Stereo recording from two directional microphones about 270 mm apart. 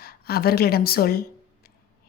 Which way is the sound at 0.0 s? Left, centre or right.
Left.